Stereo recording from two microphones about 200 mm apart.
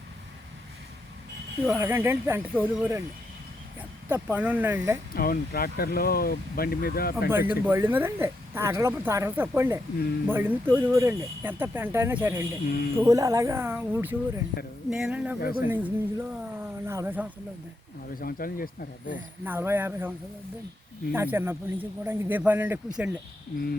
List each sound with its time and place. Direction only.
1.6 s speech: 10° right (ahead or behind)
5.1 s speech: 45° left (ahead or behind)
7.3 s speech: 10° right (ahead or behind)
15.4 s speech: 45° left (ahead or behind)
15.7 s speech: 10° right (ahead or behind)
18.1 s speech: 45° left (ahead or behind)
19.1 s speech: 10° right (ahead or behind)